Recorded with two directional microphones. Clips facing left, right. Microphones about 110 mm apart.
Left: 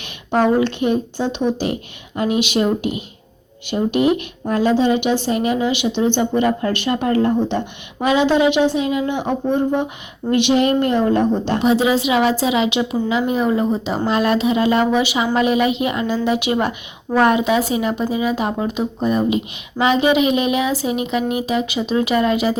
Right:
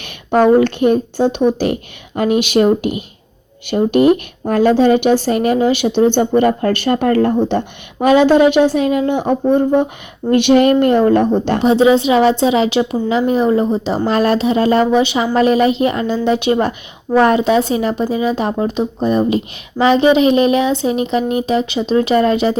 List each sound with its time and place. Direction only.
0.0 s a woman's voice: 50° right (ahead or behind)
11.6 s speech: 30° right (ahead or behind)